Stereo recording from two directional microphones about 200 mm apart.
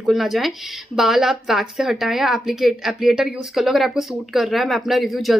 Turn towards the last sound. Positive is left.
turn(degrees=0)  # may be behind; listen again after turning